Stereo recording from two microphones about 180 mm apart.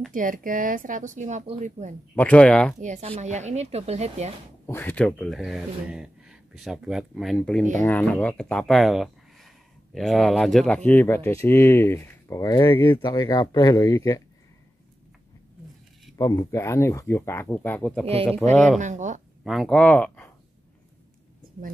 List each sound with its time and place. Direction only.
0.1 s speech: 50° right (ahead or behind)
2.1 s speech: 10° left (ahead or behind)
2.8 s speech: 40° right (ahead or behind)
4.6 s speech: 10° left (ahead or behind)
16.2 s speech: 20° left (ahead or behind)
18.8 s speech: 45° right (ahead or behind)
19.4 s speech: centre (ahead or behind)